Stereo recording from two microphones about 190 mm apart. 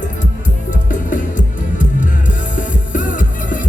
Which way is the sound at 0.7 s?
45° left (ahead or behind).